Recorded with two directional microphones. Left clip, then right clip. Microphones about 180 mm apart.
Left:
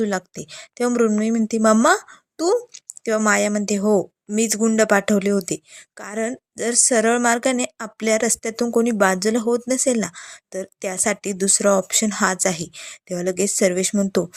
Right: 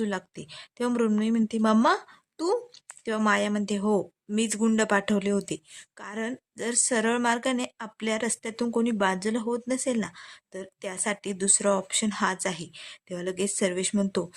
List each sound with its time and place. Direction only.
0.0 s a woman's voice: 20° left (ahead or behind)